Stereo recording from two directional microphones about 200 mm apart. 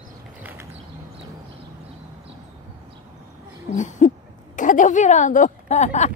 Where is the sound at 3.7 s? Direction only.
40° left (ahead or behind).